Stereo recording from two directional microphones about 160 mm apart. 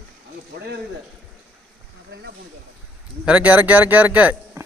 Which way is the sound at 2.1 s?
90° right.